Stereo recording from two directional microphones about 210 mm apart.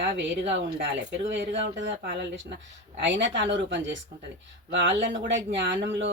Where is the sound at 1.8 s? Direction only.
50° right (ahead or behind).